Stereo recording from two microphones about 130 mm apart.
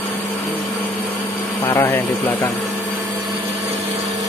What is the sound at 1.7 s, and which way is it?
Speech, 20° left (ahead or behind).